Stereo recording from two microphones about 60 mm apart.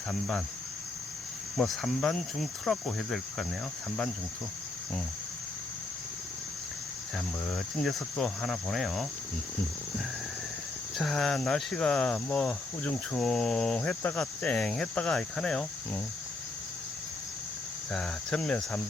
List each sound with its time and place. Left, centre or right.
0.1 s speech: centre
1.5 s cricket: centre
7.5 s cricket: centre
8.2 s speech: centre
10.9 s speech: centre
13.7 s cricket: left
14.2 s speech: centre
17.9 s speech: centre